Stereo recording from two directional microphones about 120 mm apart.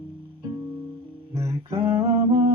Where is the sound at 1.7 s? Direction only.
25° right (ahead or behind).